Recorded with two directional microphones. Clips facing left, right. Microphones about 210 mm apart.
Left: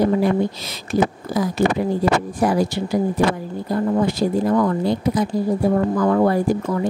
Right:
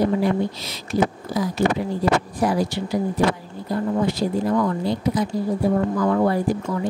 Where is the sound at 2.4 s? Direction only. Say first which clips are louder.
Left 5 dB; 50° left (ahead or behind).